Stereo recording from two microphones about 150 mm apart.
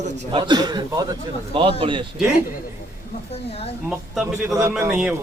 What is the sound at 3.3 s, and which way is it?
Speech, 40° left (ahead or behind).